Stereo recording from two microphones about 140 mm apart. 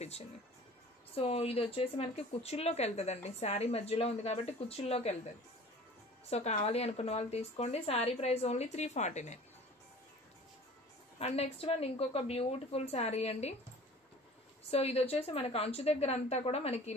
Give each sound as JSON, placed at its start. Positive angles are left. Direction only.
{"t": 1.1, "sound": "speech", "side_deg": 45}
{"t": 6.3, "sound": "speech", "side_deg": 50}
{"t": 11.1, "sound": "speech", "side_deg": 50}
{"t": 14.6, "sound": "speech", "side_deg": 45}